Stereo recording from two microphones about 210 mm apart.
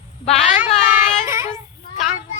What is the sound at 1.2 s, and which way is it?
Child singing, 15° right (ahead or behind).